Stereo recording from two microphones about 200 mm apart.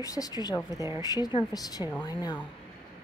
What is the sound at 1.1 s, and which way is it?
A woman's voice, 20° left (ahead or behind).